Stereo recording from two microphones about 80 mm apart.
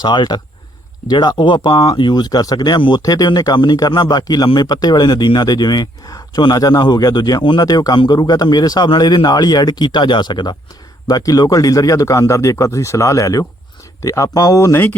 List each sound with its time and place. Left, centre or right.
0.0 s speech: left
2.0 s speech: left
3.0 s speech: left
3.8 s a man's voice: left
7.6 s a man's voice: left
7.9 s a man's voice: left
8.2 s speech: left
11.1 s a man's voice: left